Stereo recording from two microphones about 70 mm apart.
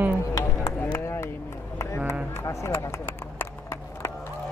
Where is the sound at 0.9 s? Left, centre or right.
Left.